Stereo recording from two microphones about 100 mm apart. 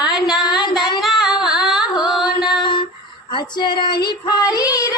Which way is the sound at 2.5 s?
55° left (ahead or behind).